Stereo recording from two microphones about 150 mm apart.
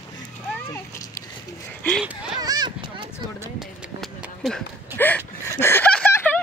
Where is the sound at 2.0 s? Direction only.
5° right (ahead or behind).